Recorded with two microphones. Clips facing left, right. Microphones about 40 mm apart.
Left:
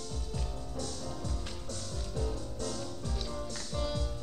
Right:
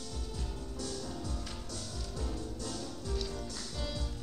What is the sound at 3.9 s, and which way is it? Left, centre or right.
Music, left.